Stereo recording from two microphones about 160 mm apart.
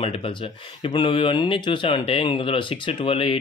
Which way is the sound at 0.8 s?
30° left (ahead or behind).